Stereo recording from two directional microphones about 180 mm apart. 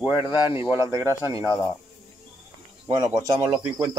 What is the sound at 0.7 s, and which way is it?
Speech, 15° right (ahead or behind).